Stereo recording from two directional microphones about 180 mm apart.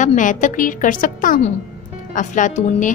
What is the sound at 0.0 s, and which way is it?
A woman's voice, 45° left (ahead or behind).